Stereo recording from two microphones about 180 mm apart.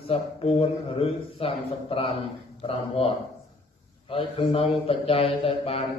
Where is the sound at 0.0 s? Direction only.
30° left (ahead or behind).